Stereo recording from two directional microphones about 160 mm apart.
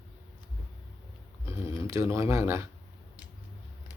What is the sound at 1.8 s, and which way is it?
Speech, 15° right (ahead or behind).